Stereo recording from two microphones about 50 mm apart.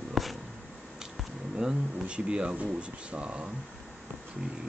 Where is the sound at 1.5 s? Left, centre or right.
Centre.